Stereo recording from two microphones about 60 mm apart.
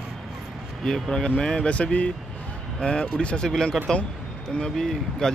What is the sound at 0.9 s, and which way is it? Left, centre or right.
Speech, centre.